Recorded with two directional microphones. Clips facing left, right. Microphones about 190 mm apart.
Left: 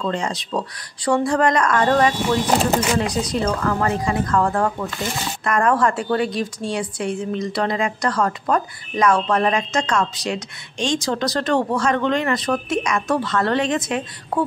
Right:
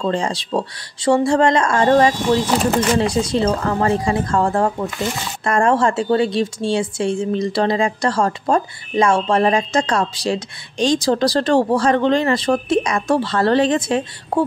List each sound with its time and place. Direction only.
0.0 s speech: 30° right (ahead or behind)